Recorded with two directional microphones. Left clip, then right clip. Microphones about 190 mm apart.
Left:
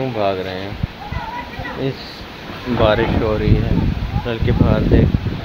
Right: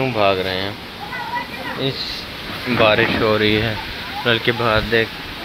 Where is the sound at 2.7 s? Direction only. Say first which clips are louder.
Right 1 dB; 10° left (ahead or behind).